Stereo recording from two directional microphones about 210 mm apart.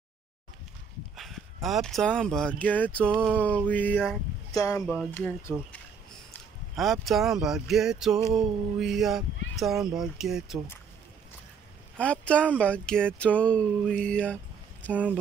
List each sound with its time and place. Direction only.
1.1 s speech: centre (ahead or behind)
4.5 s speech: 15° left (ahead or behind)
5.5 s speech: centre (ahead or behind)
6.7 s speech: centre (ahead or behind)
12.0 s speech: 5° left (ahead or behind)